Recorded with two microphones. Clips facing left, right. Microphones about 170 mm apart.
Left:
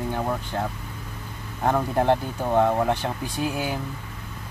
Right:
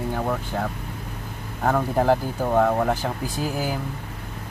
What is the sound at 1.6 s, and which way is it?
Speech, centre (ahead or behind).